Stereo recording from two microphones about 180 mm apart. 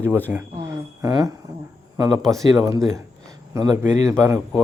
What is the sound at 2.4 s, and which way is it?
Speech, 20° right (ahead or behind).